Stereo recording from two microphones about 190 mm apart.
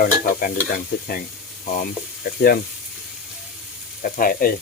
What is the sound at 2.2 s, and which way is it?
Stir, 50° left (ahead or behind).